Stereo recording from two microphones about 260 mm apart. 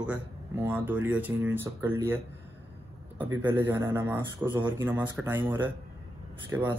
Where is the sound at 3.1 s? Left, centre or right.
Centre.